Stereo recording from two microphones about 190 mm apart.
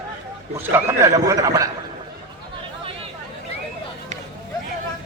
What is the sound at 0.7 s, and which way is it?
A man's voice, 15° right (ahead or behind).